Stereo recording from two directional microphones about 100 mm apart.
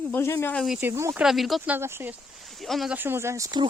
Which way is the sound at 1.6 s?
20° right (ahead or behind).